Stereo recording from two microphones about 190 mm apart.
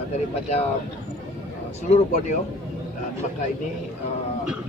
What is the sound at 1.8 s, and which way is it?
Speech, 35° left (ahead or behind).